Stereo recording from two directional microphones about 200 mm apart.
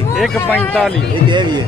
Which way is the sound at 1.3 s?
20° right (ahead or behind).